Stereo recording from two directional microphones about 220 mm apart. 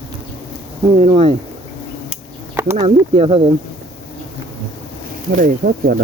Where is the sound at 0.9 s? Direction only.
30° right (ahead or behind).